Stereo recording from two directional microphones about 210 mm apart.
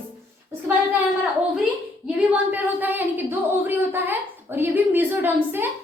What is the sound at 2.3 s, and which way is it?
A woman's voice, 10° right (ahead or behind).